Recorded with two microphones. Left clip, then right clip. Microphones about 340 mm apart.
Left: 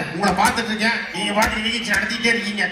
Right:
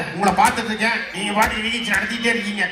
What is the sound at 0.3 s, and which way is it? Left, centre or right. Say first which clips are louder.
Speech: right 2 dB; right.